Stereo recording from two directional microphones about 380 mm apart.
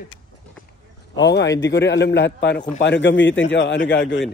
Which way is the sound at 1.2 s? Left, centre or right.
Left.